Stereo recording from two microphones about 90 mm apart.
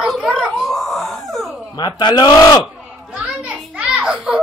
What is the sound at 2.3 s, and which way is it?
Speech, 40° left (ahead or behind).